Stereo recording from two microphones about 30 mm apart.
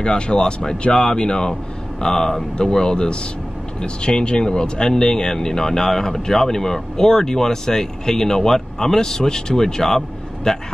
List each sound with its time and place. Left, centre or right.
0.0 s speech: left